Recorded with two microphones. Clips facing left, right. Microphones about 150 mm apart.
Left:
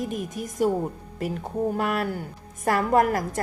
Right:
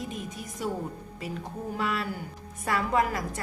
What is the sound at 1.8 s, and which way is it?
A woman's voice, 55° left (ahead or behind).